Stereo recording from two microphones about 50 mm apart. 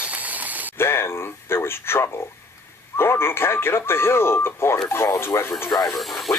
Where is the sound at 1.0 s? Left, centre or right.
Left.